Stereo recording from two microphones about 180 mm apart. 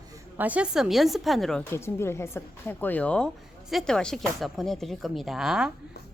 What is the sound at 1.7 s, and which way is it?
A woman's voice, 15° left (ahead or behind).